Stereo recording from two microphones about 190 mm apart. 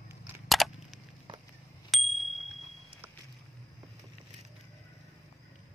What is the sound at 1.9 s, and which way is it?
Bicycle bell, centre (ahead or behind).